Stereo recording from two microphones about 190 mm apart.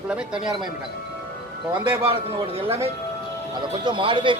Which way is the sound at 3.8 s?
25° right (ahead or behind).